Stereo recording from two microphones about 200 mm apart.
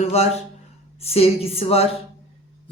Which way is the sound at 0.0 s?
30° left (ahead or behind).